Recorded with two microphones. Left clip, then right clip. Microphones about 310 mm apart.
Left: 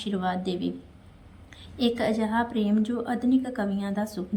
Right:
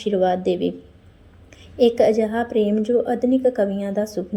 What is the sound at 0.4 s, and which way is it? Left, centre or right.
Speech, centre.